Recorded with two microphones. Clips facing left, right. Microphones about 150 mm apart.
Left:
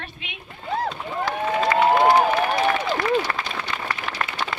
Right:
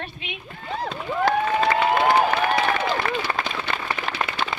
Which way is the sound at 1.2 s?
60° right (ahead or behind).